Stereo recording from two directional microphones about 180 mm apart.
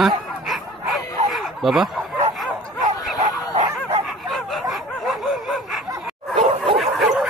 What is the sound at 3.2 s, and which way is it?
Dog, 40° right (ahead or behind).